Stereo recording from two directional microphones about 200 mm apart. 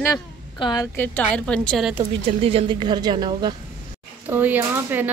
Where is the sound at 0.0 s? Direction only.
20° left (ahead or behind).